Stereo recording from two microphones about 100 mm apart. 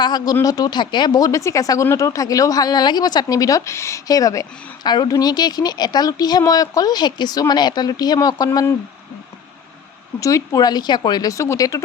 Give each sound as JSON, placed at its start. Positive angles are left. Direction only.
{"t": 0.0, "sound": "speech", "side_deg": 45}
{"t": 10.2, "sound": "speech", "side_deg": 35}